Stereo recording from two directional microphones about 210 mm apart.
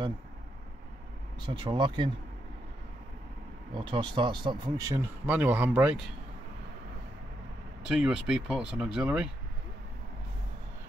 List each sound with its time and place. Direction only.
1.4 s speech: 25° right (ahead or behind)
3.7 s speech: 25° right (ahead or behind); by 6.1 s 5° right (ahead or behind)
7.8 s speech: 5° right (ahead or behind)